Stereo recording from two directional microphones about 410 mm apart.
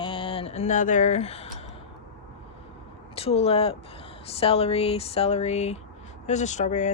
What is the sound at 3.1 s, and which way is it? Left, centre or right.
A woman's voice, centre.